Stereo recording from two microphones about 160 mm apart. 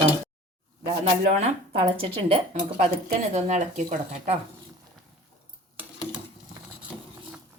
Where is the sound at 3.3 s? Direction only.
50° right (ahead or behind).